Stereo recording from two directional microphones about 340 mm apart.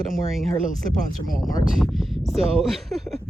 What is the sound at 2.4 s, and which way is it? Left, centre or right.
Speech, centre.